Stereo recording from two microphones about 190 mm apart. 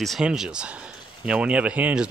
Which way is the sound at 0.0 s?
Centre (ahead or behind).